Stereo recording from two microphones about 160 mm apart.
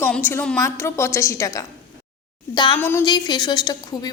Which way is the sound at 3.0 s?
25° left (ahead or behind).